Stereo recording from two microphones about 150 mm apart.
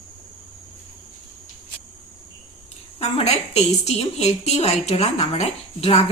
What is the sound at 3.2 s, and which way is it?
A woman's voice, 45° left (ahead or behind).